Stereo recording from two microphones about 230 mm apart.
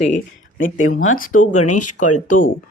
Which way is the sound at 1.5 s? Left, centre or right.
Left.